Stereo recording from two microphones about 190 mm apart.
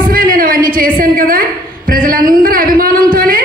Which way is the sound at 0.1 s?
50° right (ahead or behind).